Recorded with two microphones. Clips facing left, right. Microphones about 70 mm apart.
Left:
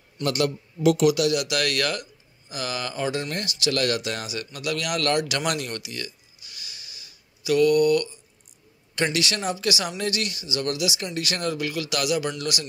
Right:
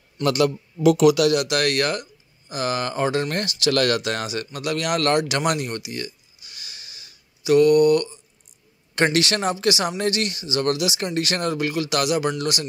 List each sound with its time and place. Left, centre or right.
1.0 s speech: right
1.3 s speech: right
7.4 s mantra: right
8.9 s speech: right